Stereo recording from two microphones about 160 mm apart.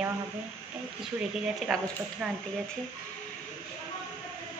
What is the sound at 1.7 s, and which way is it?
Speech, centre (ahead or behind).